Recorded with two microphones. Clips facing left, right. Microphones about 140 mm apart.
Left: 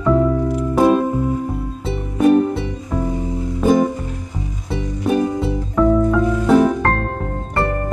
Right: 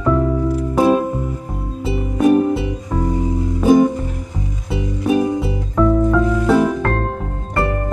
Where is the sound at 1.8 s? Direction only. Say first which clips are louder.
Even; 10° right (ahead or behind).